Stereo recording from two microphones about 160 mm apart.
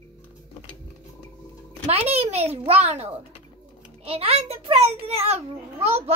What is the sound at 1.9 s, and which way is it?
A child's voice, 40° right (ahead or behind).